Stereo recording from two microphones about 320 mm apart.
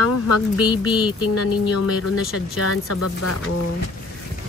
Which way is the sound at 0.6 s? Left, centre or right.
Centre.